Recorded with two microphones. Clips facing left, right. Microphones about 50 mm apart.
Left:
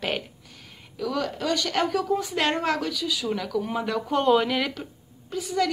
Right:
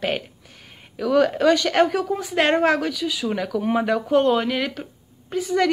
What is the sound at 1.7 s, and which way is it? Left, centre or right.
Speech, right.